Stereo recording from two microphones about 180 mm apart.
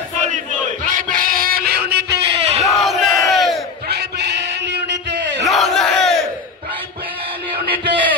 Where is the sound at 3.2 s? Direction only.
Centre (ahead or behind).